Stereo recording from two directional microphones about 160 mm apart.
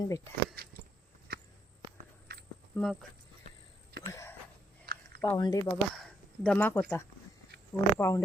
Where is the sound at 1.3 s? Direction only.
70° right (ahead or behind).